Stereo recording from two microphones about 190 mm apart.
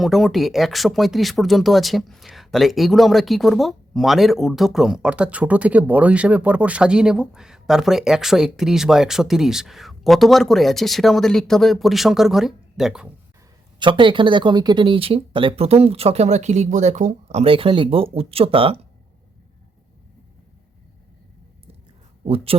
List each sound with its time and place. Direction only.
0.0 s speech: centre (ahead or behind)
13.7 s speech: 25° right (ahead or behind)
22.2 s speech: 30° right (ahead or behind)